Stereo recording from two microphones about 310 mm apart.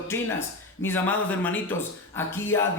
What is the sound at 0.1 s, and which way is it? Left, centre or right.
Speech, centre.